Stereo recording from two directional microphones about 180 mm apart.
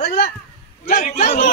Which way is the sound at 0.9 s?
45° left (ahead or behind).